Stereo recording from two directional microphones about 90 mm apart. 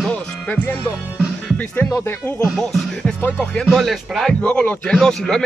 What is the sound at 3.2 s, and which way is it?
Speech, 25° left (ahead or behind).